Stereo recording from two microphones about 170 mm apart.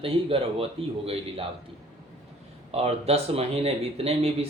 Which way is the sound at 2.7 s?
35° right (ahead or behind).